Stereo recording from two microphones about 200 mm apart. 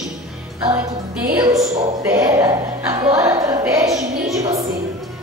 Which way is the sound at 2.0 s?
15° right (ahead or behind).